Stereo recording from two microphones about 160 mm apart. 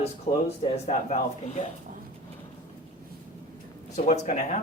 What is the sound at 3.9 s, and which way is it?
Speech, 50° left (ahead or behind).